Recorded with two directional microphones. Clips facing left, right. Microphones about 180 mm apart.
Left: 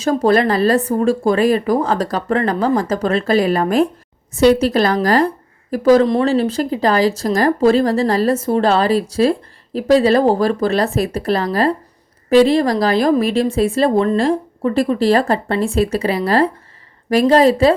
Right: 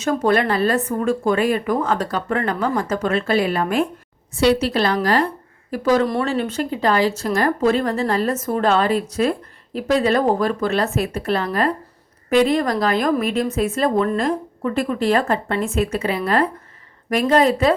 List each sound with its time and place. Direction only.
0.0 s a woman's voice: 35° left (ahead or behind)
6.1 s a woman's voice: 30° left (ahead or behind)